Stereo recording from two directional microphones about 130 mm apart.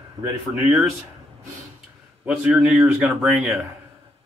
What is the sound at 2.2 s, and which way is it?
A man's voice, 5° right (ahead or behind).